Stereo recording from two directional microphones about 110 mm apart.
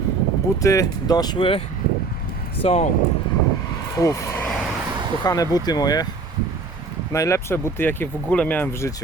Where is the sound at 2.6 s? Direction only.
70° left (ahead or behind).